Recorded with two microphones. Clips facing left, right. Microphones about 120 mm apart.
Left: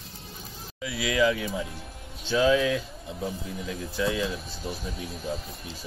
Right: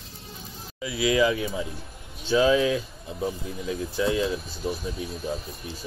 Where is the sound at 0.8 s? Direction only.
15° right (ahead or behind).